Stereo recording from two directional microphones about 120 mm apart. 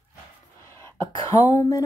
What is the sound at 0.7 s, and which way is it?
Cough, 20° left (ahead or behind).